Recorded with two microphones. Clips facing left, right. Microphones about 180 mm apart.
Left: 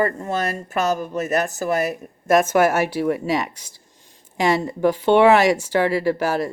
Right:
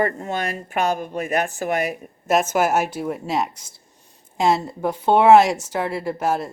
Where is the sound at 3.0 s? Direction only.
80° left.